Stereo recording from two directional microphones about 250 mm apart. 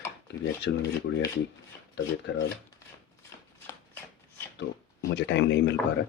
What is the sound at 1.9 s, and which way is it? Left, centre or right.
Speech, left.